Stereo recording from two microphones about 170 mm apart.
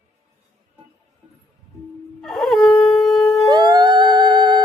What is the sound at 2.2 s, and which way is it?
Dog, centre (ahead or behind).